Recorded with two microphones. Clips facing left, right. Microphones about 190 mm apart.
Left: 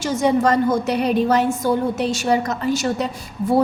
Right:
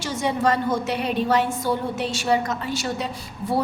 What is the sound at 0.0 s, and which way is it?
A woman's voice, 45° left (ahead or behind).